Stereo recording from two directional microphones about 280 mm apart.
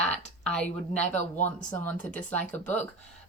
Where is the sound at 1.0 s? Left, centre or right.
Left.